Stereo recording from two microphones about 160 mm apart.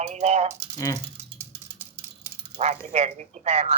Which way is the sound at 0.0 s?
45° right (ahead or behind).